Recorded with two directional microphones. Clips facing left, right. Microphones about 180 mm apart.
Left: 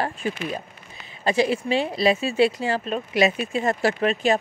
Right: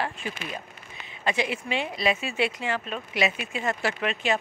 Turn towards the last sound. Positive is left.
turn(degrees=40)  # may be behind; listen again after turning